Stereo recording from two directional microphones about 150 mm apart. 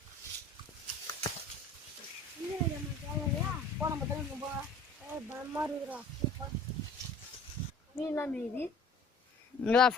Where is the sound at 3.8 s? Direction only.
5° right (ahead or behind).